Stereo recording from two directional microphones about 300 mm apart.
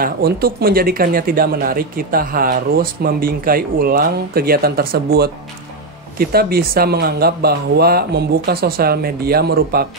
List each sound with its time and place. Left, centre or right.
0.0 s speech: right